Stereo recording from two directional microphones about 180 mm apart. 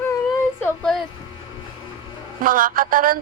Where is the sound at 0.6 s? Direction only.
5° left (ahead or behind).